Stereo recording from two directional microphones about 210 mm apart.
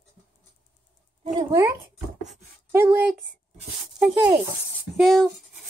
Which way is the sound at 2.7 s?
10° right (ahead or behind).